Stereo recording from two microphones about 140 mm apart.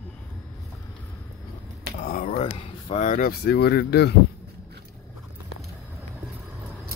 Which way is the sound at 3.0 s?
80° left.